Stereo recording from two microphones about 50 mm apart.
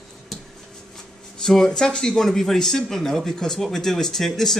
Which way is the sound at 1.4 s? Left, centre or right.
Centre.